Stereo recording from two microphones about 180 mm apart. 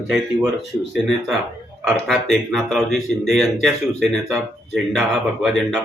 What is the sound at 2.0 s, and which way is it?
Speech, centre (ahead or behind).